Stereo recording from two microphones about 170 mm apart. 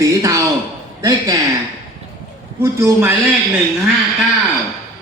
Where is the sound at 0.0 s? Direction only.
20° right (ahead or behind).